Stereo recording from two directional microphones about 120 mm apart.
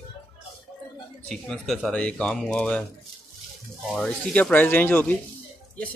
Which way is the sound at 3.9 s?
5° left (ahead or behind).